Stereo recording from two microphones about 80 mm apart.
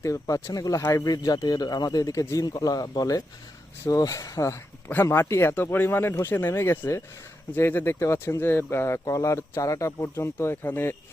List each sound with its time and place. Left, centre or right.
0.0 s speech: left